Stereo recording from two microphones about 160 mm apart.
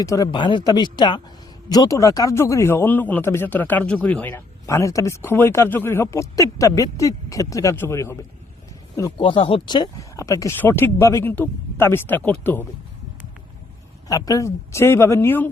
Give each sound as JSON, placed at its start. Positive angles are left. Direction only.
{"t": 0.0, "sound": "speech", "side_deg": 20}
{"t": 0.3, "sound": "a man's voice", "side_deg": 30}
{"t": 9.2, "sound": "a man's voice", "side_deg": 35}
{"t": 14.1, "sound": "a man's voice", "side_deg": 20}